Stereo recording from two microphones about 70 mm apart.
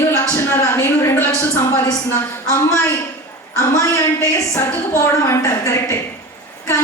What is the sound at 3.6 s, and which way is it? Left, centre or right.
A woman's voice, left.